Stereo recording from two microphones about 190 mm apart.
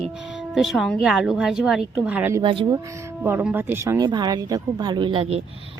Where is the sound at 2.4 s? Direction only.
25° right (ahead or behind).